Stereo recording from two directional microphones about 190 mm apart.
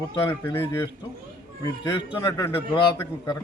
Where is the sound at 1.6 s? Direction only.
20° left (ahead or behind).